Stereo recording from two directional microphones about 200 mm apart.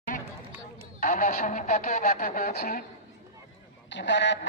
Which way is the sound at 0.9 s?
40° left (ahead or behind).